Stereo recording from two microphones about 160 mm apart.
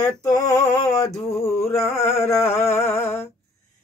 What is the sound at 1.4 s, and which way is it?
Music, 15° left (ahead or behind).